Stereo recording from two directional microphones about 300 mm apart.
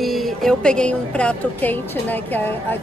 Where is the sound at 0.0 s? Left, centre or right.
Centre.